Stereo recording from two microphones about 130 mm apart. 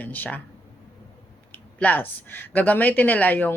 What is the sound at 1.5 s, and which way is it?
Speech, 15° left (ahead or behind).